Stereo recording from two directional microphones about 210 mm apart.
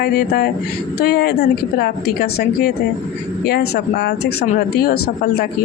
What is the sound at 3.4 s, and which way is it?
Speech, 50° left (ahead or behind).